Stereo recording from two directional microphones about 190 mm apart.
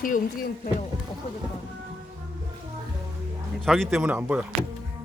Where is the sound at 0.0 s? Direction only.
45° left (ahead or behind).